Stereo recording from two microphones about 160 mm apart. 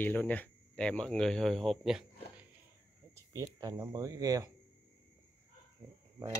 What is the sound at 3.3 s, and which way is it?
Speech, 20° right (ahead or behind).